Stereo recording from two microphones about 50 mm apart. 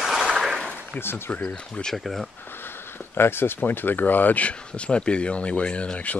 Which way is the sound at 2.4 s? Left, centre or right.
Left.